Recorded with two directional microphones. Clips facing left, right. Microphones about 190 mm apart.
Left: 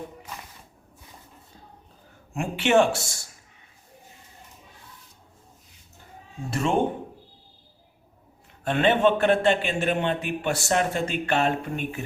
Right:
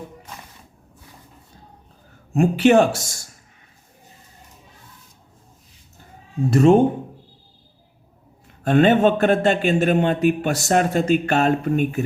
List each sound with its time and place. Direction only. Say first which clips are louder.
2.3 s speech: right 6 dB; 40° right (ahead or behind)
6.5 s speech: right 12 dB; 40° right (ahead or behind)
8.6 s a man's voice: right 5 dB; 45° right (ahead or behind)